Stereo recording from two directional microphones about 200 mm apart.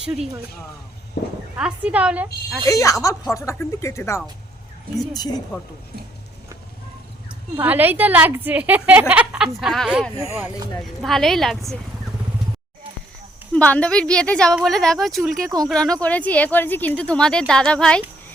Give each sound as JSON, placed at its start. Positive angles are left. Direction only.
{"t": 1.2, "sound": "speech", "side_deg": 50}
{"t": 1.5, "sound": "a woman's voice", "side_deg": -5}
{"t": 2.6, "sound": "speech", "side_deg": 15}
{"t": 7.5, "sound": "a woman's voice", "side_deg": -10}
{"t": 10.2, "sound": "a woman's voice", "side_deg": -15}
{"t": 10.8, "sound": "speech", "side_deg": 0}
{"t": 13.5, "sound": "speech", "side_deg": 5}
{"t": 15.4, "sound": "speech", "side_deg": -20}
{"t": 15.7, "sound": "speech", "side_deg": 5}